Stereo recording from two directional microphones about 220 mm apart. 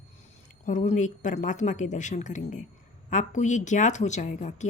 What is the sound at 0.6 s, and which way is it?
A woman's voice, 35° left (ahead or behind).